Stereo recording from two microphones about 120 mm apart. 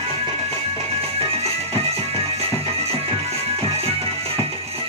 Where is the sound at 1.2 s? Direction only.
55° right (ahead or behind).